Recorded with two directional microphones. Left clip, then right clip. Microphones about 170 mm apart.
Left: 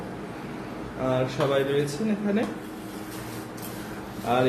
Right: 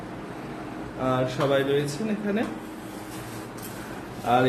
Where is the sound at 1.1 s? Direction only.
15° right (ahead or behind).